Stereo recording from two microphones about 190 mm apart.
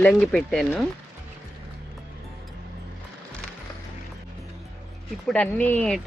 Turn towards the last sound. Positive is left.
turn(degrees=5)  # may be behind; listen again after turning